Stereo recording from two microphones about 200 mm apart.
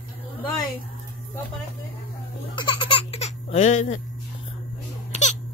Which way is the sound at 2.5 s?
25° left (ahead or behind).